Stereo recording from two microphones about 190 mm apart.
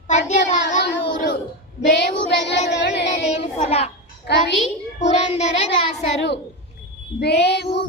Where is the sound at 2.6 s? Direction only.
60° left (ahead or behind).